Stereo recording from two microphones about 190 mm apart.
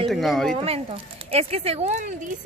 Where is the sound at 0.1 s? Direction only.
Centre (ahead or behind).